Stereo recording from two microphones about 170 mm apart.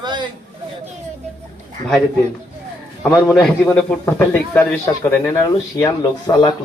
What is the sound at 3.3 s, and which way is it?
Speech, 10° left (ahead or behind).